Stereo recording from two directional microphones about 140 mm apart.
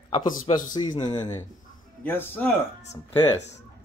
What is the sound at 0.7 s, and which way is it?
Speech, 30° left (ahead or behind).